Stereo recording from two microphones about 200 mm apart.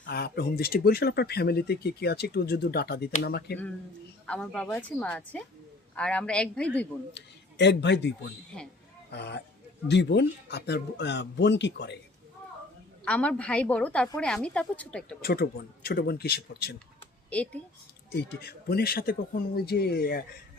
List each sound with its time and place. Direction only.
0.0 s speech: 55° left (ahead or behind)
4.3 s a woman's voice: 5° left (ahead or behind)
7.1 s speech: 60° left (ahead or behind)
9.1 s speech: 55° left (ahead or behind)
13.1 s a woman's voice: 5° left (ahead or behind)
15.2 s speech: 50° left (ahead or behind)
17.2 s speech: 5° left (ahead or behind)
18.1 s speech: 50° left (ahead or behind)